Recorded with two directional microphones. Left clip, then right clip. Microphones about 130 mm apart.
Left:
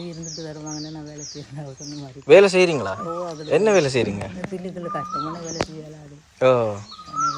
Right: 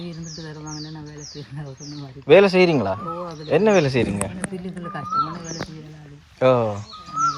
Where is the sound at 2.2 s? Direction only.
20° left (ahead or behind).